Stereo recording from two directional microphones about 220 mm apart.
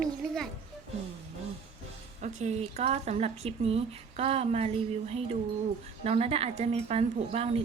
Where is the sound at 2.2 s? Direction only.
30° right (ahead or behind).